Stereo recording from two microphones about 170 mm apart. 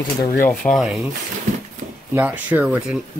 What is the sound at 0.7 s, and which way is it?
Speech, centre (ahead or behind).